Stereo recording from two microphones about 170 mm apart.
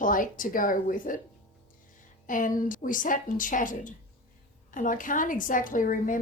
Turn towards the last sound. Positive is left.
turn(degrees=50)  # may be behind; listen again after turning